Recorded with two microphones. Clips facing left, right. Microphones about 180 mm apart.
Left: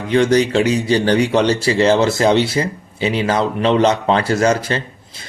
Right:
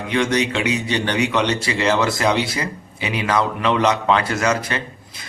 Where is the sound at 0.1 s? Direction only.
35° left (ahead or behind).